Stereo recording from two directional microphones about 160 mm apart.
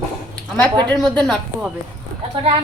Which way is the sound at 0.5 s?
10° left (ahead or behind).